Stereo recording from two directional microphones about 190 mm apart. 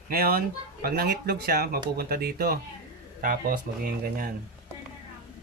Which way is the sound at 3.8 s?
50° right (ahead or behind).